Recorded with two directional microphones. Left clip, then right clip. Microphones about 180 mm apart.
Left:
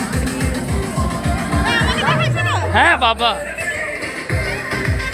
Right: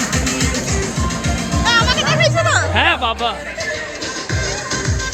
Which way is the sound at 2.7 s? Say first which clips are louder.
Left 3 dB; 5° left (ahead or behind).